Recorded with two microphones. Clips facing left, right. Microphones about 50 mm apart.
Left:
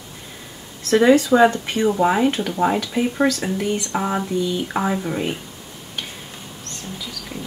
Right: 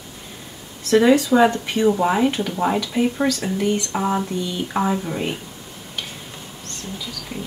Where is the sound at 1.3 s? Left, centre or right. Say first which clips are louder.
Left 1 dB; centre.